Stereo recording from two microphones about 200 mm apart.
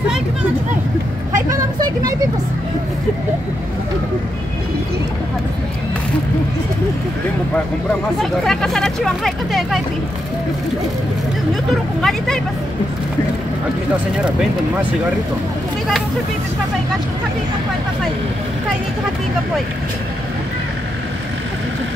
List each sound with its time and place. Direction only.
1.3 s vehicle: 15° right (ahead or behind)
8.2 s speech: centre (ahead or behind)
11.7 s speech: centre (ahead or behind)
14.1 s speech: 5° right (ahead or behind)